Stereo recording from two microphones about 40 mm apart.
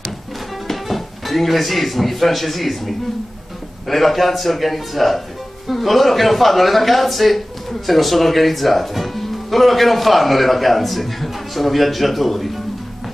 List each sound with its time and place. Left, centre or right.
0.7 s a man's voice: centre